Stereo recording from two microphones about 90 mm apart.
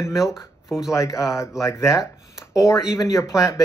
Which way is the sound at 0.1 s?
5° right (ahead or behind).